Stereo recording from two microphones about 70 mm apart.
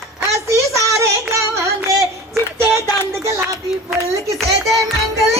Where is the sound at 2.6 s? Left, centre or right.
Right.